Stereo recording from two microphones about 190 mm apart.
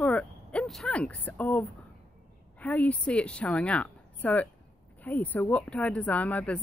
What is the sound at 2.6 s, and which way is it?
Speech, 10° left (ahead or behind).